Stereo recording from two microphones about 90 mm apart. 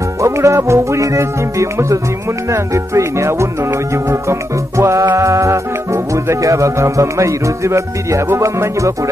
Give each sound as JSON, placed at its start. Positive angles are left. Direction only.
{"t": 0.2, "sound": "speech", "side_deg": -35}